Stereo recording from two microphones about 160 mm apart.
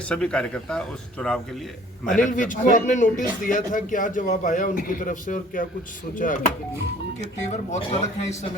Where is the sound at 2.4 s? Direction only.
50° left (ahead or behind).